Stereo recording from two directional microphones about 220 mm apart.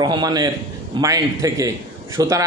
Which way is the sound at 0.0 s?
15° right (ahead or behind).